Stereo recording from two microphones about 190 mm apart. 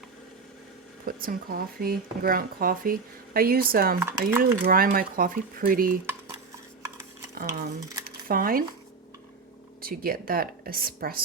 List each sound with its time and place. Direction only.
1.0 s speech: 50° right (ahead or behind)
4.0 s speech: 10° right (ahead or behind)
4.6 s speech: 50° right (ahead or behind)
7.4 s speech: 20° right (ahead or behind)
8.0 s a sound: 50° right (ahead or behind)
9.8 s speech: 50° right (ahead or behind)